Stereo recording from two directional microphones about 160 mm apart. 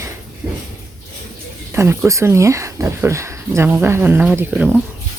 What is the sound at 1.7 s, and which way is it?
Speech, 15° right (ahead or behind).